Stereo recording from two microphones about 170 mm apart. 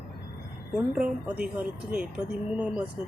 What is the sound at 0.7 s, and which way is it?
Speech, 5° right (ahead or behind).